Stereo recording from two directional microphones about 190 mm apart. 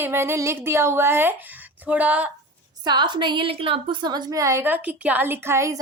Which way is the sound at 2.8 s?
25° right (ahead or behind).